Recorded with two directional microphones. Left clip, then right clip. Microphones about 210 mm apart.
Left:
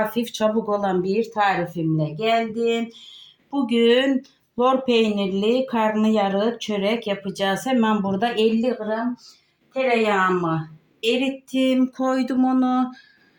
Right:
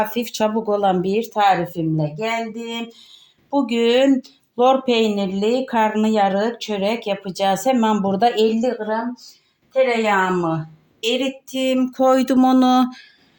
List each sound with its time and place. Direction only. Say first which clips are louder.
0.1 s speech: right 1 dB; 35° right (ahead or behind)
11.0 s speech: right 1 dB; 35° right (ahead or behind); by 13.1 s 55° right (ahead or behind)